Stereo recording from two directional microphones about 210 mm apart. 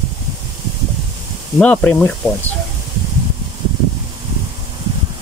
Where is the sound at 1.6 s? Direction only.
5° left (ahead or behind).